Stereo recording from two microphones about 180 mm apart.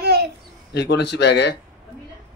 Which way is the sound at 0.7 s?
70° left (ahead or behind).